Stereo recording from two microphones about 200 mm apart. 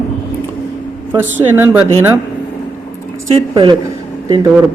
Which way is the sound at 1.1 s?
10° right (ahead or behind).